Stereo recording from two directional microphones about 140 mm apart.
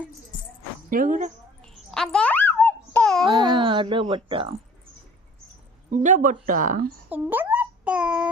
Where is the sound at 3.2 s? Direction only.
30° right (ahead or behind).